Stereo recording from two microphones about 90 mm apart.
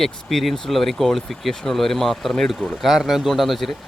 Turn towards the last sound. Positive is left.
turn(degrees=0)  # may be behind; listen again after turning